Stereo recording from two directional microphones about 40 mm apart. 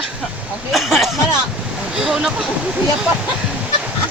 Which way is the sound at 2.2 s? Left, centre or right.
Right.